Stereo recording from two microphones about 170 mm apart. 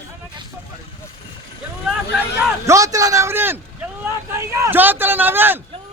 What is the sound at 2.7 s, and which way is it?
A man's voice, 20° right (ahead or behind).